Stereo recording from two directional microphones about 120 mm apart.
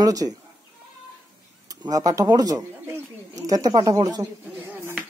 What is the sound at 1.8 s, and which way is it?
Speech, 30° right (ahead or behind).